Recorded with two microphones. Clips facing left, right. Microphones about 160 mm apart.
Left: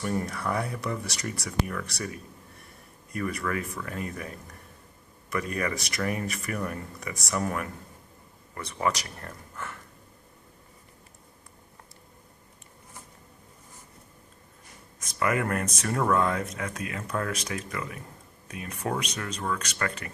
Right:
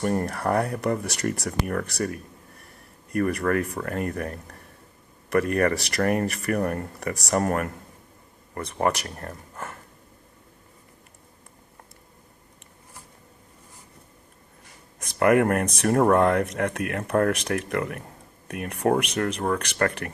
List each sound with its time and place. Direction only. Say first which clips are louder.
0.0 s speech: right 5 dB; 55° right (ahead or behind)
3.1 s speech: right 7 dB; 55° right (ahead or behind)
9.2 s speech: right 3 dB; 35° right (ahead or behind)
14.9 s speech: right 8 dB; 60° right (ahead or behind)